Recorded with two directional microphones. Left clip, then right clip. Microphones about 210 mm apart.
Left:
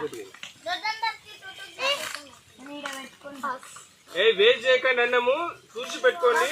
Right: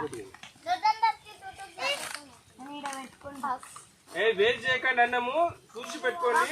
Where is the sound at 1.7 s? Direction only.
45° right (ahead or behind).